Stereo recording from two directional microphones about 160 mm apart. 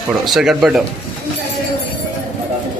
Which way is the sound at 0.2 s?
Centre (ahead or behind).